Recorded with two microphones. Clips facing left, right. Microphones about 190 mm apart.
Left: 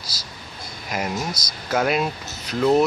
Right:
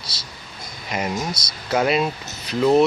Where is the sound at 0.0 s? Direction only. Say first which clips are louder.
Even; 25° right (ahead or behind).